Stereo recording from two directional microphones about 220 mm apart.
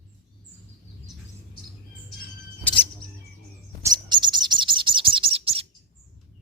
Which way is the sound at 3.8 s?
20° right (ahead or behind).